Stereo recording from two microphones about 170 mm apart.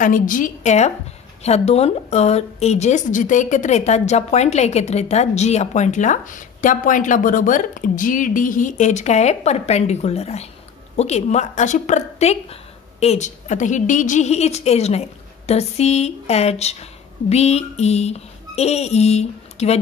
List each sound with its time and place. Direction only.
0.0 s a woman's voice: 50° left (ahead or behind)